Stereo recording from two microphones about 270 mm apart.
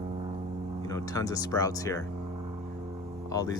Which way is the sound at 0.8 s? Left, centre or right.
Centre.